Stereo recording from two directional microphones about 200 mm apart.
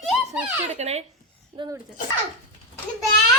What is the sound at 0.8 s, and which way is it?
Speech, 35° right (ahead or behind).